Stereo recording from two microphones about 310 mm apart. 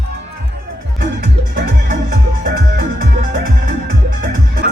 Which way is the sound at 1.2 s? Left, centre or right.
Right.